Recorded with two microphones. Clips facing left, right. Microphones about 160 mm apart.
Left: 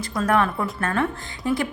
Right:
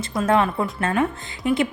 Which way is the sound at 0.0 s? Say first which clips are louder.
Right 2 dB; 20° right (ahead or behind).